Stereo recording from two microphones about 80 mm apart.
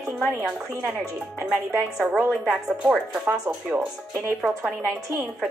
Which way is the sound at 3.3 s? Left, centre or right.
Right.